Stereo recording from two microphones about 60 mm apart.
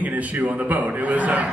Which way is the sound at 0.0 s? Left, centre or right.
Right.